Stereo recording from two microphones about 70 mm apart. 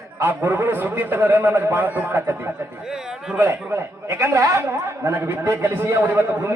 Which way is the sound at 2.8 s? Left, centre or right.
Centre.